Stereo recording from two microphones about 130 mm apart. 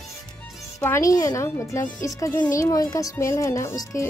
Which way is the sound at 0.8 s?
20° left (ahead or behind).